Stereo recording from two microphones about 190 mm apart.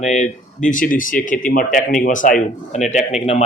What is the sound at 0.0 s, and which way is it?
Speech, 40° left (ahead or behind).